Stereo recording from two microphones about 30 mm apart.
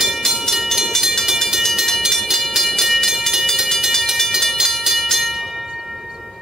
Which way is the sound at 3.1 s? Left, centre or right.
Centre.